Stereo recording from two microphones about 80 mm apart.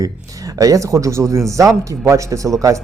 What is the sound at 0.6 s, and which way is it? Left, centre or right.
Speech, right.